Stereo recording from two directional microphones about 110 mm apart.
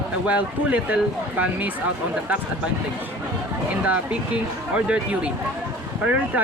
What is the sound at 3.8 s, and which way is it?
Speech, 15° right (ahead or behind).